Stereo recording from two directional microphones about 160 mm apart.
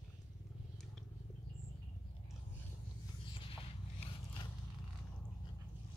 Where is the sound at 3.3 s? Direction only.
35° left (ahead or behind).